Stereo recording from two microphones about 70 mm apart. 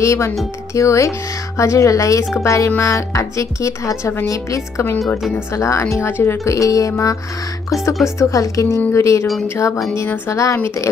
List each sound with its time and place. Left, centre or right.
0.0 s speech: left
6.4 s speech: left
8.2 s speech: left
10.0 s speech: left
10.3 s speech: left